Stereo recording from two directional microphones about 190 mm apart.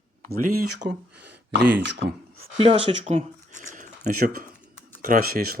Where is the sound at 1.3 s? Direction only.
60° right (ahead or behind).